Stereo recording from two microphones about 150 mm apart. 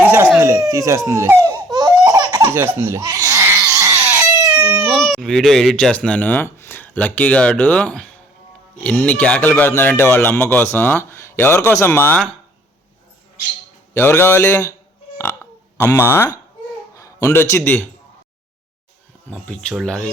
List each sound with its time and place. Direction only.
0.0 s a sound: 15° right (ahead or behind)
0.7 s speech: 20° right (ahead or behind)
1.7 s laughter: 25° right (ahead or behind)
2.4 s laughter: 15° right (ahead or behind)
4.6 s speech: 20° right (ahead or behind)
4.9 s speech: centre (ahead or behind)
13.9 s speech: 15° left (ahead or behind)
15.8 s a man's voice: 20° left (ahead or behind)
19.3 s speech: 5° left (ahead or behind)